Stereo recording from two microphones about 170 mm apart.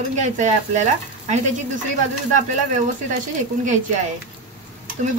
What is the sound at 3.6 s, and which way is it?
Speech, 45° right (ahead or behind).